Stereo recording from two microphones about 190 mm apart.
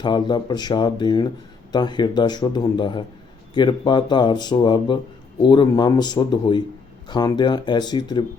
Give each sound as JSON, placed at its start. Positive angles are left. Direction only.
{"t": 0.0, "sound": "speech", "side_deg": 25}